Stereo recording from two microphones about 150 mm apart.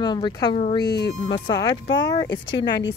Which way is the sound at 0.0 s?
30° left (ahead or behind).